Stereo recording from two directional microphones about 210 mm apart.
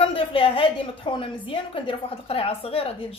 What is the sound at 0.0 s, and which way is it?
A woman's voice, 25° left (ahead or behind).